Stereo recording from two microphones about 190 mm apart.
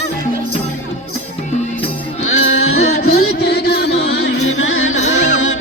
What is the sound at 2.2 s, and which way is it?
Music, 90° left.